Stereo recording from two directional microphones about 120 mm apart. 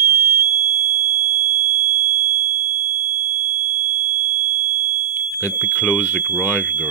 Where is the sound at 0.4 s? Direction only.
25° right (ahead or behind).